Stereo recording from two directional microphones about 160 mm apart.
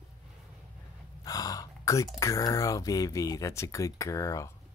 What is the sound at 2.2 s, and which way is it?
Speech, 20° left (ahead or behind).